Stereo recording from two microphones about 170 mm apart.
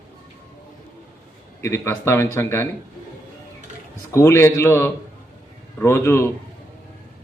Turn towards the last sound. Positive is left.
turn(degrees=15)  # may be behind; listen again after turning